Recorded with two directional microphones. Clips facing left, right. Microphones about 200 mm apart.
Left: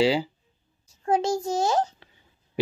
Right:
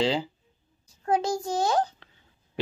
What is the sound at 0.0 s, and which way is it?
Speech, 10° left (ahead or behind).